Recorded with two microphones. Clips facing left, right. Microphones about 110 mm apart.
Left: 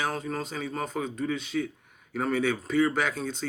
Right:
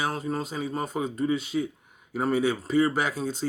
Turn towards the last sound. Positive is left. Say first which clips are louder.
# right 1 dB
turn(degrees=-5)  # may be behind; listen again after turning